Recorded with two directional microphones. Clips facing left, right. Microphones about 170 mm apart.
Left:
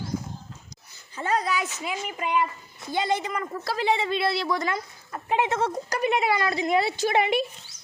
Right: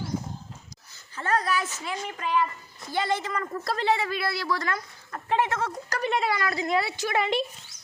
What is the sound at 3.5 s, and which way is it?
Speech, centre (ahead or behind).